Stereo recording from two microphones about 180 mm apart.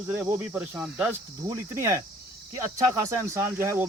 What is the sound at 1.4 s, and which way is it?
Speech, 15° right (ahead or behind).